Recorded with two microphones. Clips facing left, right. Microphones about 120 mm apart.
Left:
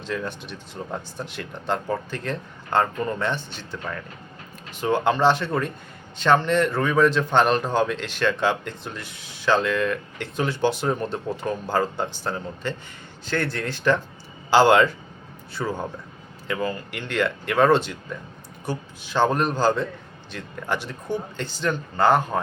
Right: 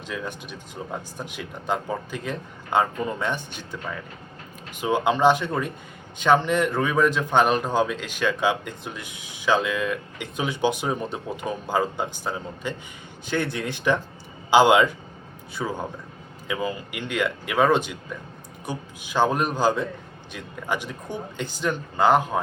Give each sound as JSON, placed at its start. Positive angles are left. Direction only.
{"t": 0.1, "sound": "speech", "side_deg": -10}